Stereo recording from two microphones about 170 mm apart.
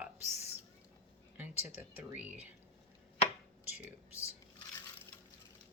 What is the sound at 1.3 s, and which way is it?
Dishes, 10° right (ahead or behind).